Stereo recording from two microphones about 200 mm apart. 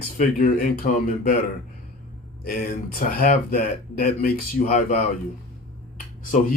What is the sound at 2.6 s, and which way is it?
Speech, 45° left (ahead or behind).